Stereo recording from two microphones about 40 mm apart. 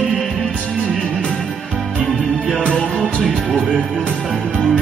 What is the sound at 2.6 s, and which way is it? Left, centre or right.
Music, centre.